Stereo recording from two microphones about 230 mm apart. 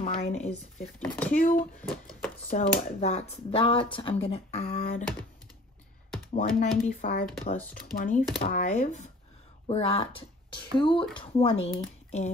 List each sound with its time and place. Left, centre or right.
0.0 s speech: left
1.6 s speech: centre
2.5 s speech: left
4.7 s speech: left
6.3 s speech: left